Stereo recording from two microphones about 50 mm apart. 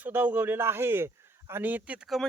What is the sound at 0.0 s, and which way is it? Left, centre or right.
Speech, right.